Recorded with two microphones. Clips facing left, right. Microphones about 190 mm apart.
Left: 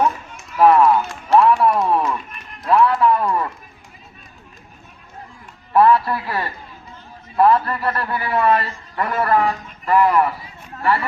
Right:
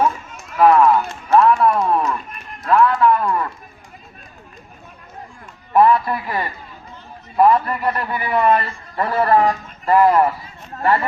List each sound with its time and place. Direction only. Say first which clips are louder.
0.6 s speech: even; 5° left (ahead or behind)
2.6 s music: right 1 dB; 15° left (ahead or behind)
5.7 s a man's voice: even; 15° right (ahead or behind); by 11.0 s 40° right (ahead or behind)